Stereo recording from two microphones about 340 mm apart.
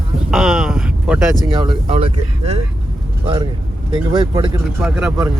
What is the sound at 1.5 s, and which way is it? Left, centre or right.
Speech, centre.